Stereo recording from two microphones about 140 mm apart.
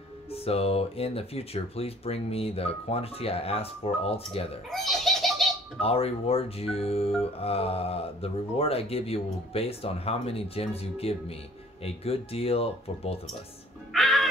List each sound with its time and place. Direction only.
0.3 s speech: 45° left (ahead or behind)
4.6 s laughter: centre (ahead or behind)
5.8 s speech: 45° left (ahead or behind)
13.9 s music: centre (ahead or behind)